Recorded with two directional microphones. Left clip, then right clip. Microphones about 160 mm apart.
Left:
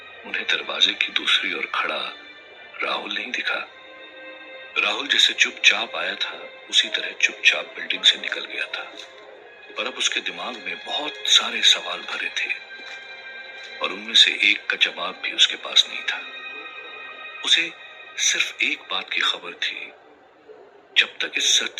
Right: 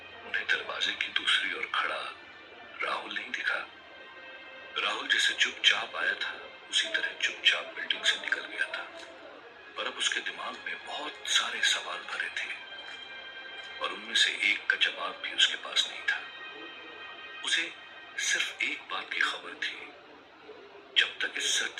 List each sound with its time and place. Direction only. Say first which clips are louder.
0.3 s a man's voice: left 6 dB; 45° left (ahead or behind)
4.7 s a man's voice: left 7 dB; 45° left (ahead or behind)
13.6 s a man's voice: left 7 dB; 45° left (ahead or behind)
17.4 s a man's voice: left 10 dB; 45° left (ahead or behind)
20.9 s a man's voice: left 7 dB; 45° left (ahead or behind)